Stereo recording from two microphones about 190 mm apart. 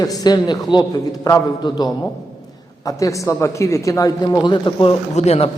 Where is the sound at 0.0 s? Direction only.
20° left (ahead or behind).